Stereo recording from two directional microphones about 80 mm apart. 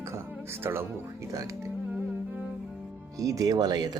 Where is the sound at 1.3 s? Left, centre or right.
Right.